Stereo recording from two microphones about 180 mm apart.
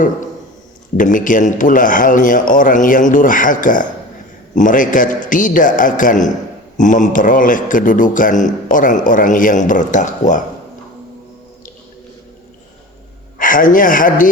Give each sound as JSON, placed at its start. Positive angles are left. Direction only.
{"t": 0.9, "sound": "a man's voice", "side_deg": 45}
{"t": 13.4, "sound": "a man's voice", "side_deg": 50}